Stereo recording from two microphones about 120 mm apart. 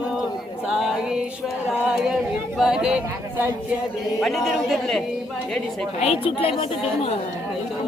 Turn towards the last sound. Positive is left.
turn(degrees=50)  # may be behind; listen again after turning